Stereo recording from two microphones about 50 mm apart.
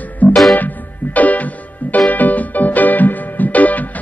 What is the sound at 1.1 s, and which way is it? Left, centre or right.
Music, left.